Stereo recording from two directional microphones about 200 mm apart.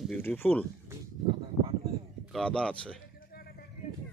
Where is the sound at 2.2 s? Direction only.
5° left (ahead or behind).